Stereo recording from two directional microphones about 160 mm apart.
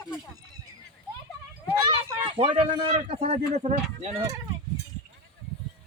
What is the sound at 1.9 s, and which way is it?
Speech, 35° right (ahead or behind).